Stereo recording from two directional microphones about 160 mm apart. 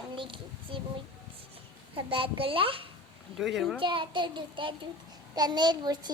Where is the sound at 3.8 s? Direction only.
30° right (ahead or behind).